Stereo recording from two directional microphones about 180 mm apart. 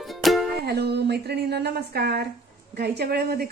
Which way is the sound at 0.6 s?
65° right (ahead or behind).